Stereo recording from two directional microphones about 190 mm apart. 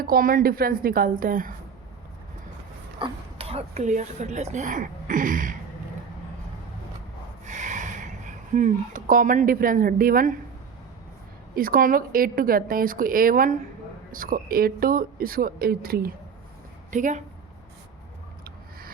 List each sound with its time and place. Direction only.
0.0 s a woman's voice: 50° right (ahead or behind)
3.0 s speech: 30° right (ahead or behind)
7.4 s a sound: 40° right (ahead or behind)
11.5 s a woman's voice: 50° right (ahead or behind)
16.9 s speech: 40° right (ahead or behind)